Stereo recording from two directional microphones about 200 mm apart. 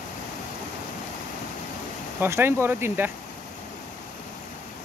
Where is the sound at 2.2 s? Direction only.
10° right (ahead or behind).